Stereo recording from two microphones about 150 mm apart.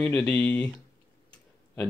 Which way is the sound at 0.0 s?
10° left (ahead or behind).